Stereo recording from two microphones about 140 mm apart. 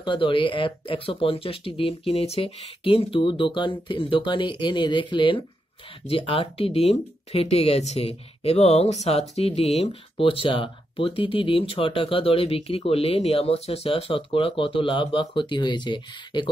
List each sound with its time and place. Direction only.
0.0 s speech: 35° left (ahead or behind)